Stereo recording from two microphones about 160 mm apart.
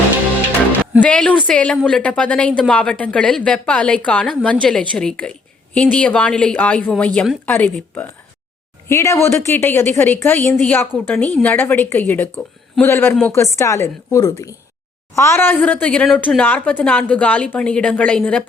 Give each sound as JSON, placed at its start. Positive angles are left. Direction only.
{"t": 1.0, "sound": "a woman's voice", "side_deg": 10}